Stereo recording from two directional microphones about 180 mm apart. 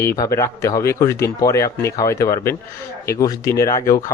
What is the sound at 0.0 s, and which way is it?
Speech, 15° left (ahead or behind).